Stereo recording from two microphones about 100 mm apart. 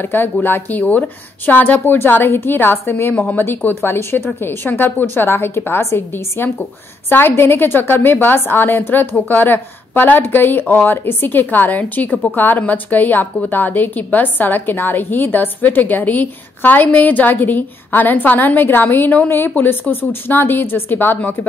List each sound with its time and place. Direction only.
0.0 s a woman's voice: 20° left (ahead or behind)